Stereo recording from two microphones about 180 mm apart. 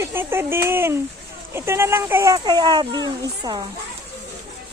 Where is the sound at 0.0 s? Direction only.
15° right (ahead or behind).